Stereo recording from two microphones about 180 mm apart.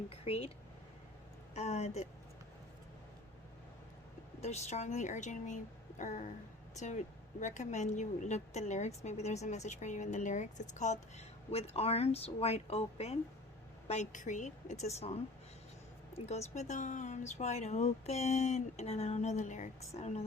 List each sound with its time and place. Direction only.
0.1 s speech: 35° left (ahead or behind)
1.5 s a woman's voice: 40° left (ahead or behind)
4.4 s a woman's voice: 40° left (ahead or behind)
6.0 s a sound: 45° left (ahead or behind)
6.7 s a woman's voice: 40° left (ahead or behind)